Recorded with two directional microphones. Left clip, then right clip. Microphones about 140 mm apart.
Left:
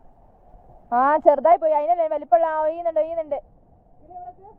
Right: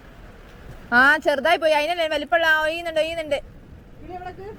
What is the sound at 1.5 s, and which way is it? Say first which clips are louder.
A woman's voice: left 2 dB; 25° left (ahead or behind).